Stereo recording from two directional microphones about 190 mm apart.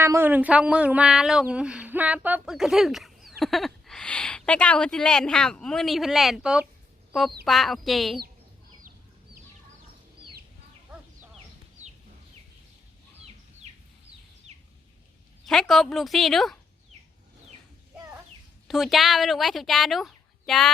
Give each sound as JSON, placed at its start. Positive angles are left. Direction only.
{"t": 0.0, "sound": "speech", "side_deg": -10}
{"t": 13.6, "sound": "a sound", "side_deg": -35}
{"t": 14.5, "sound": "bird", "side_deg": -35}
{"t": 15.4, "sound": "speech", "side_deg": 0}
{"t": 18.7, "sound": "speech", "side_deg": 0}